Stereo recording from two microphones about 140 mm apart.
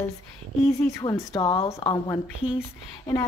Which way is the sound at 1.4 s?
45° left (ahead or behind).